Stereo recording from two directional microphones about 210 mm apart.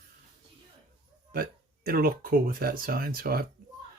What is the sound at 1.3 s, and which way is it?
Speech, 45° right (ahead or behind).